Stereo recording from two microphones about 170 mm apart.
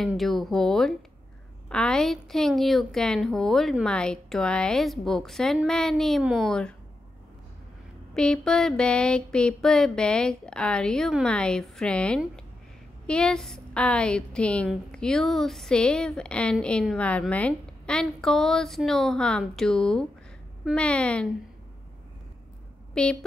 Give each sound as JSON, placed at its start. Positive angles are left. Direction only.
{"t": 0.0, "sound": "a woman's voice", "side_deg": 0}
{"t": 8.1, "sound": "a woman's voice", "side_deg": 5}
{"t": 23.0, "sound": "speech", "side_deg": 5}